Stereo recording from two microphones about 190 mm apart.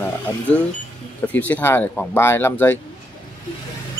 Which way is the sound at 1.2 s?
10° left (ahead or behind).